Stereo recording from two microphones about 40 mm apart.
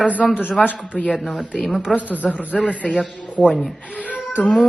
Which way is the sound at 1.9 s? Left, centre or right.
Left.